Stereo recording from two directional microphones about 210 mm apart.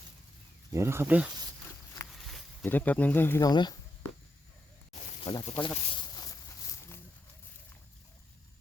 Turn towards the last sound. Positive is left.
turn(degrees=15)  # may be behind; listen again after turning